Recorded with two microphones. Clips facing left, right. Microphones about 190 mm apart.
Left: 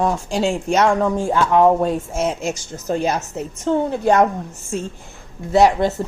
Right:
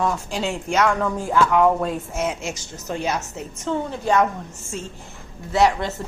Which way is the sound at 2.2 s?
40° left (ahead or behind).